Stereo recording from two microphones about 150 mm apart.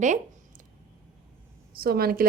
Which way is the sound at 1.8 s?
85° right.